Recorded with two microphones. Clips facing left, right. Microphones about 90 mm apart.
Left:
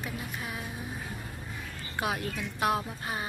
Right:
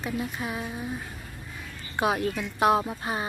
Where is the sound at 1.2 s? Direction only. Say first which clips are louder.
Left 1 dB; 10° left (ahead or behind).